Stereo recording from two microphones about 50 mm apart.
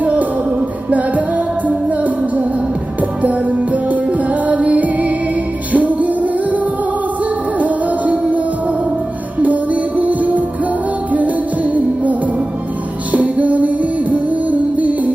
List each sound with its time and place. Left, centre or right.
0.0 s music: right
7.6 s music: right
10.0 s music: right